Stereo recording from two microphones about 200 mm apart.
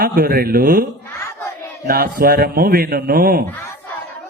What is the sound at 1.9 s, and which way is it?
A man's voice, 50° right (ahead or behind).